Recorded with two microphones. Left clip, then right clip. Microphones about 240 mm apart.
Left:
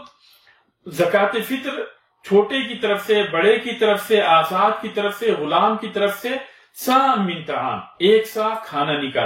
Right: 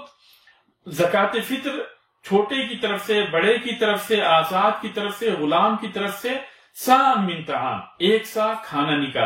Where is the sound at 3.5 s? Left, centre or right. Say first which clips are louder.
Left 3 dB; right.